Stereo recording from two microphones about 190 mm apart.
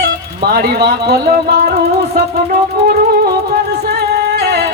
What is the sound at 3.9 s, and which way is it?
Music, 60° right (ahead or behind).